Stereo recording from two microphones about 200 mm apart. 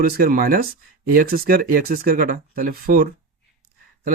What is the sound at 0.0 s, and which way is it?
Speech, 50° right (ahead or behind).